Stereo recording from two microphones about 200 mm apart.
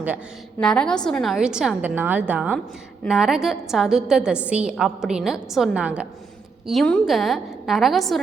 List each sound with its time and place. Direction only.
0.6 s a woman's voice: 5° left (ahead or behind)